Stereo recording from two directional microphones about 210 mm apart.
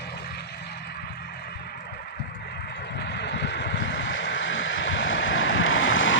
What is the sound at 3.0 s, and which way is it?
Vehicle, 55° left (ahead or behind).